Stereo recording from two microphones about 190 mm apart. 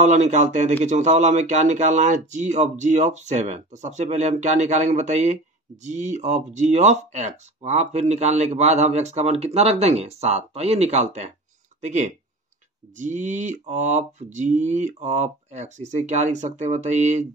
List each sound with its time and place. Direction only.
0.0 s speech: 40° right (ahead or behind)